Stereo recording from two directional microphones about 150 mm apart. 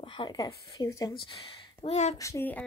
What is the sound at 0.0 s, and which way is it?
A woman's voice, 30° left (ahead or behind).